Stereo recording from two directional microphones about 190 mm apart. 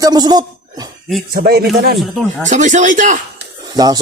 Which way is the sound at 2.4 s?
40° right (ahead or behind).